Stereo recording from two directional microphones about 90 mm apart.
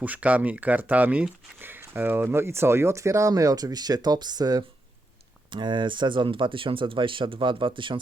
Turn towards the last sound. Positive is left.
turn(degrees=-65)  # may be behind; listen again after turning